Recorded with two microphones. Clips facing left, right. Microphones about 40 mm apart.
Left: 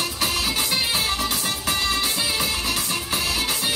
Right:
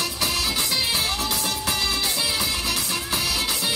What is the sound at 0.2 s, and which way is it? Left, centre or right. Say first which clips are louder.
Music: left 1 dB; left.